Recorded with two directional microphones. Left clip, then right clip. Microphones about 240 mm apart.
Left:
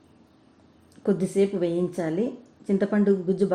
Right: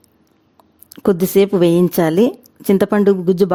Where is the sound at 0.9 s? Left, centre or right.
Right.